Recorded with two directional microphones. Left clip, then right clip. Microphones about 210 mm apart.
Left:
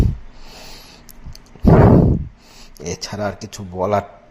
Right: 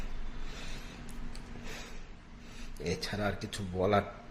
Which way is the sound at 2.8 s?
30° left (ahead or behind).